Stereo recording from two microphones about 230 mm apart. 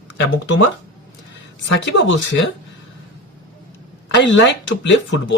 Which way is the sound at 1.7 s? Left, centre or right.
Left.